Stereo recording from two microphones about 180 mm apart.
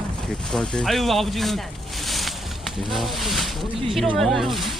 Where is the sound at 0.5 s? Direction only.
5° left (ahead or behind).